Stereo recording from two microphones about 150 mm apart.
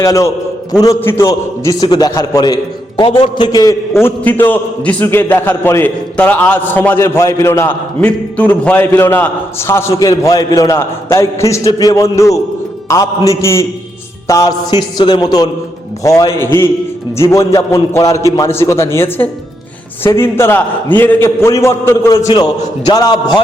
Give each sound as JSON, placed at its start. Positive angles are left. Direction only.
{"t": 0.0, "sound": "a man's voice", "side_deg": 20}
{"t": 3.0, "sound": "a man's voice", "side_deg": 35}
{"t": 3.9, "sound": "a man's voice", "side_deg": 15}